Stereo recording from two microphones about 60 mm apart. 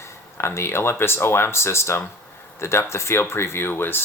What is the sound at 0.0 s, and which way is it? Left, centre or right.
Speech, left.